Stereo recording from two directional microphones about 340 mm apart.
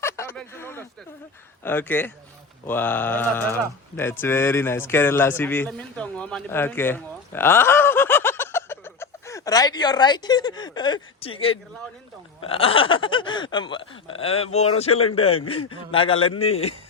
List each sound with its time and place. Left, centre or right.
0.0 s a sound: centre
1.6 s a man's voice: centre
16.1 s a man's voice: left
16.4 s speech: centre